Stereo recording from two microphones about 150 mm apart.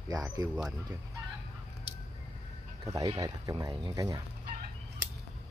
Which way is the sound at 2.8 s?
25° right (ahead or behind).